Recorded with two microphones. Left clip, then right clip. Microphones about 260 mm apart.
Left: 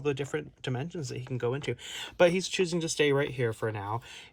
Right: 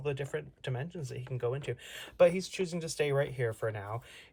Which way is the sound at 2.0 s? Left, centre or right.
Left.